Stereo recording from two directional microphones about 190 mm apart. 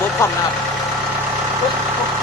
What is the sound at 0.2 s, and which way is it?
Speech, 15° left (ahead or behind).